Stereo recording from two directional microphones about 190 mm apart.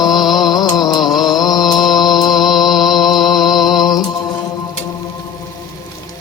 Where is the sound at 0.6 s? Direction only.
20° left (ahead or behind).